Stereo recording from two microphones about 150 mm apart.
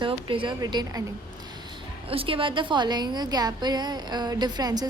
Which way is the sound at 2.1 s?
40° right (ahead or behind).